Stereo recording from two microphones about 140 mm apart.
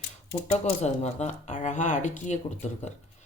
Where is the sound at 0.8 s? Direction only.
50° left (ahead or behind).